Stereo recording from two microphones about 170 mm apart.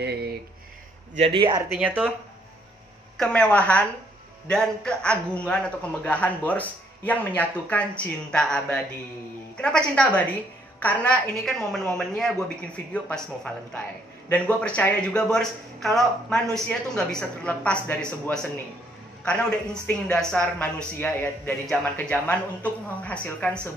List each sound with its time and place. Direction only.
0.0 s speech: 70° right (ahead or behind)
1.1 s speech: 35° right (ahead or behind)
1.7 s speech: 10° right (ahead or behind)
3.2 s a man's voice: 5° left (ahead or behind)